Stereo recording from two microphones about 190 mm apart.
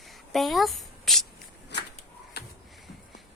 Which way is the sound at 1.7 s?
65° left (ahead or behind).